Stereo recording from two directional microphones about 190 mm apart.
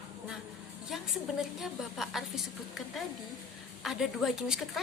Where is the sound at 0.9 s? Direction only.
Centre (ahead or behind).